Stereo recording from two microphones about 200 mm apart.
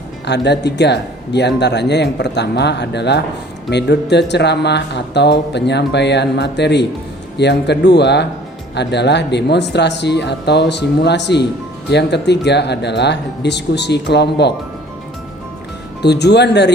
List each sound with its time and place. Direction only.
0.3 s speech: 60° left (ahead or behind)
16.0 s speech: 55° left (ahead or behind)